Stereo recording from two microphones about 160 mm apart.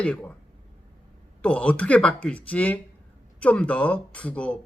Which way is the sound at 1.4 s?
10° left (ahead or behind).